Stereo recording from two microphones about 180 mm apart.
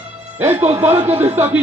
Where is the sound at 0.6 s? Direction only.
40° right (ahead or behind).